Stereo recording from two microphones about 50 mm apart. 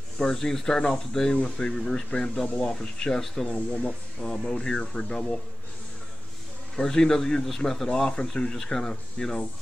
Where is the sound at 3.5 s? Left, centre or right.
Left.